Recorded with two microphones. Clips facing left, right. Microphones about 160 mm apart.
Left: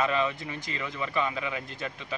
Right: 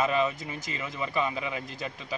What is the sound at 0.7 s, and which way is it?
A man's voice, 5° right (ahead or behind).